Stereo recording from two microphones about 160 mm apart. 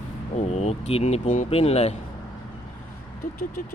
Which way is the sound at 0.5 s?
40° left (ahead or behind).